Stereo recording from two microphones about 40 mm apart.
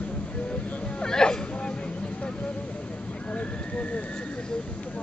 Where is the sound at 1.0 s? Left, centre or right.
Centre.